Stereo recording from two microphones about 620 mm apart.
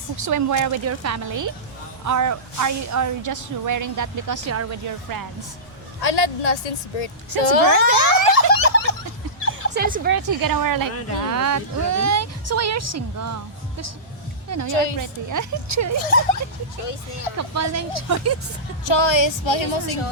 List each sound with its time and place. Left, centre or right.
0.2 s speech: right
6.0 s a woman's voice: left
7.9 s boing: left
8.4 s a sound: left
9.7 s speech: centre
10.2 s speech: right
16.0 s speech: left
17.3 s speech: right
18.9 s speech: left